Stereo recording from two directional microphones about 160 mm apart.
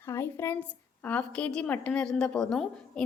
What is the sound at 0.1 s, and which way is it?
A woman's voice, 15° left (ahead or behind).